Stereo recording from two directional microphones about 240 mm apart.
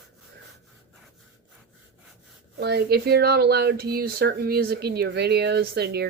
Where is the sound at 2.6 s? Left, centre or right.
Right.